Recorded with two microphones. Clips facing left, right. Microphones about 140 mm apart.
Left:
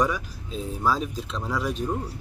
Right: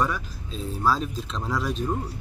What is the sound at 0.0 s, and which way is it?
Speech, 15° left (ahead or behind).